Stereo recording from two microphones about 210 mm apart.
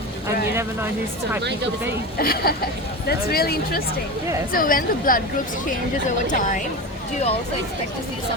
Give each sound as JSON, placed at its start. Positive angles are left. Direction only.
{"t": 1.4, "sound": "speech", "side_deg": -55}
{"t": 2.1, "sound": "speech", "side_deg": 45}